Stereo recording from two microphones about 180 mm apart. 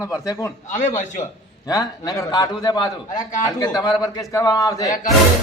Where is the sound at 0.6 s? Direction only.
45° left (ahead or behind).